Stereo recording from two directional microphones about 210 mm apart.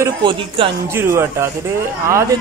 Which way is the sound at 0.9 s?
10° right (ahead or behind).